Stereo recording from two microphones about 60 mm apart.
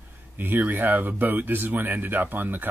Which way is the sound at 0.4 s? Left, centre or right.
Right.